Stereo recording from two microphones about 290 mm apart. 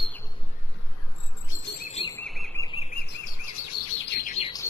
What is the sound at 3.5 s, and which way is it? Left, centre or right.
Bird vocalization, left.